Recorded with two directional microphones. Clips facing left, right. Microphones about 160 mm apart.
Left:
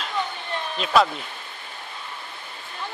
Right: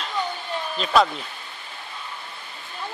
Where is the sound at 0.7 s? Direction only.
Centre (ahead or behind).